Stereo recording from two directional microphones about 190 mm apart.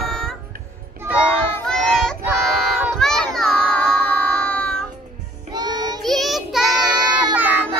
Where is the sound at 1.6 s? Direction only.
5° left (ahead or behind).